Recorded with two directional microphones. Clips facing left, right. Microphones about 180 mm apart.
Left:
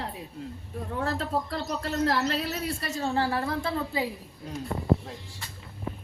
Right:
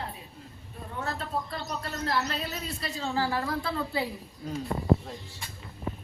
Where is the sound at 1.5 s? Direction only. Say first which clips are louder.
Left 4 dB; 90° left.